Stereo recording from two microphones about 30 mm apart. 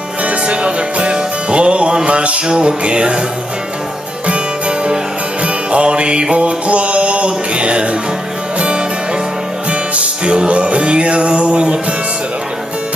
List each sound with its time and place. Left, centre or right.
0.2 s music: right
2.4 s music: right
4.3 s music: right
6.3 s a sound: right
8.5 s music: right